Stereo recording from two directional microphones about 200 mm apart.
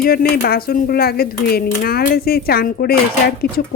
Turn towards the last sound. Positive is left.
turn(degrees=55)  # may be behind; listen again after turning